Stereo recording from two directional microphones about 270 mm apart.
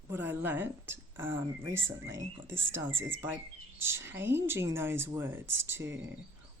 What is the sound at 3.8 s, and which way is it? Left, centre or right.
Speech, centre.